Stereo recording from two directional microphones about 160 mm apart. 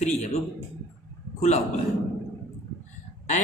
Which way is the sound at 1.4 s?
40° left (ahead or behind).